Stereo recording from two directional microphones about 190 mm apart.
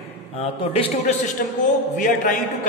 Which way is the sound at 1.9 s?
45° left (ahead or behind).